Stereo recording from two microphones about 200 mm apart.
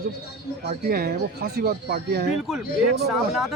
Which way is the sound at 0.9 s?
50° right (ahead or behind).